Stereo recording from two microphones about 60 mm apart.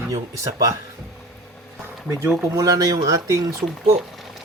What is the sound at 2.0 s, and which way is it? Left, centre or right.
Speech, right.